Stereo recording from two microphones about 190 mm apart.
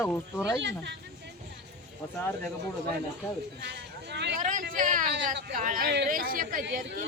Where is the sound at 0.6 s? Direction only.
65° right (ahead or behind).